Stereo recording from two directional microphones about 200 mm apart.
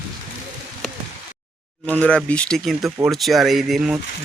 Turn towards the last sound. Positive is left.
turn(degrees=0)  # may be behind; listen again after turning